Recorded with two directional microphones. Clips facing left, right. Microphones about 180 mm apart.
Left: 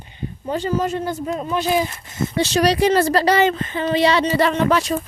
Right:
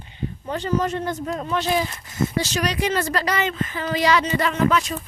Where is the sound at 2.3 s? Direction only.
30° left (ahead or behind).